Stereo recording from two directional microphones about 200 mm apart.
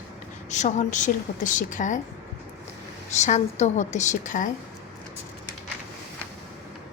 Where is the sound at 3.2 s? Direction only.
35° left (ahead or behind).